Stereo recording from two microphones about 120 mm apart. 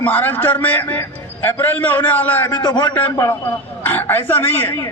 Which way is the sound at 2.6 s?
35° left (ahead or behind).